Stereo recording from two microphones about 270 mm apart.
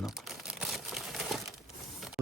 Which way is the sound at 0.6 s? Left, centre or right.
Centre.